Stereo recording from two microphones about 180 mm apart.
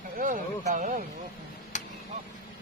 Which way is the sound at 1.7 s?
40° left (ahead or behind).